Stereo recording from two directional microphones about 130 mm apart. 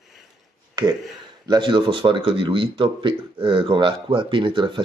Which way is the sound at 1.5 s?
35° right (ahead or behind).